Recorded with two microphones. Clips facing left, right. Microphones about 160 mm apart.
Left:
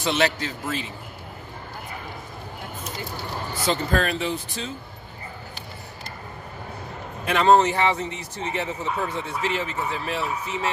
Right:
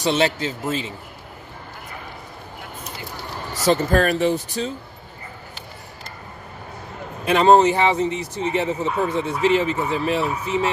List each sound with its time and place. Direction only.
0.0 s speech: 30° right (ahead or behind)
3.6 s speech: 45° right (ahead or behind)
7.2 s speech: 20° right (ahead or behind)